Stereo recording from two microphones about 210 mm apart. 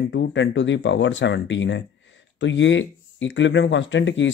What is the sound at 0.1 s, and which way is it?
Speech, 60° left (ahead or behind).